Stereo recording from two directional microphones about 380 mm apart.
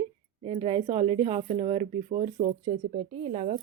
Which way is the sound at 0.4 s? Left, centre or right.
Centre.